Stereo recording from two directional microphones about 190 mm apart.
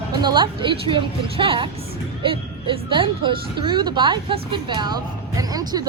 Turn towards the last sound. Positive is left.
turn(degrees=-20)  # may be behind; listen again after turning